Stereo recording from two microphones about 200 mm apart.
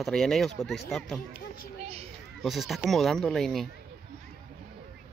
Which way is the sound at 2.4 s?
Centre (ahead or behind).